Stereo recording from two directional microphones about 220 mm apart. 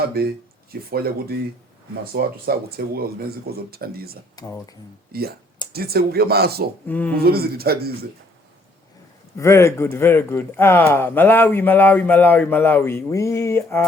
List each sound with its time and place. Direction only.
0.2 s speech: 45° right (ahead or behind)
2.1 s speech: 45° right (ahead or behind)
6.8 s speech: 5° left (ahead or behind)
7.2 s speech: 45° right (ahead or behind)
9.4 s speech: 10° left (ahead or behind)